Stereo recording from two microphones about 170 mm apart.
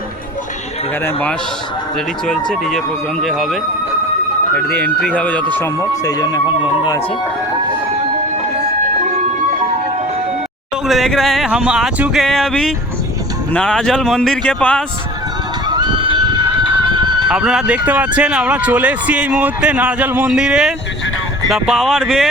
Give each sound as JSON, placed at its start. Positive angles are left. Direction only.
{"t": 1.0, "sound": "a man's voice", "side_deg": 10}
{"t": 2.5, "sound": "a man's voice", "side_deg": 0}
{"t": 10.8, "sound": "speech", "side_deg": 0}
{"t": 15.6, "sound": "a sound", "side_deg": -25}
{"t": 16.9, "sound": "horse", "side_deg": -25}
{"t": 17.2, "sound": "speech", "side_deg": -5}